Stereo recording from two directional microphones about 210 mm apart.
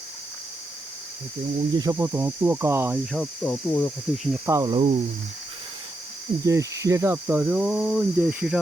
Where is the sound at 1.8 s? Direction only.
15° right (ahead or behind).